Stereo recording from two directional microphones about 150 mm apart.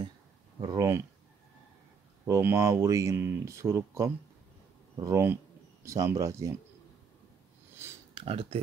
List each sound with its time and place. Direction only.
0.6 s speech: 25° right (ahead or behind)
2.2 s speech: 20° right (ahead or behind)
8.1 s speech: 40° right (ahead or behind)